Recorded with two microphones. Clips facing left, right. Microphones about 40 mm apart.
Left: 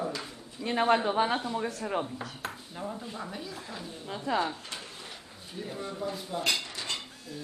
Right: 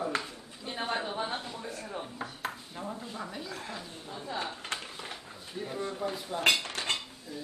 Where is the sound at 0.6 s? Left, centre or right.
Left.